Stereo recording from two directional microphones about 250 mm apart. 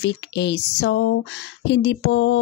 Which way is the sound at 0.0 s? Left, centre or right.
Left.